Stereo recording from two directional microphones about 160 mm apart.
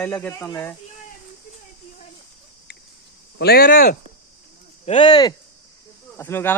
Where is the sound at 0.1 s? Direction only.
10° left (ahead or behind).